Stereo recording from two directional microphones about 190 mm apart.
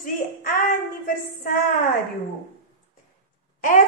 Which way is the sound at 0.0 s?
50° left (ahead or behind).